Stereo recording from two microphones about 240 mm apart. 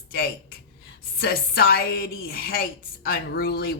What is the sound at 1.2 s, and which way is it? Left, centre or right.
A woman's voice, left.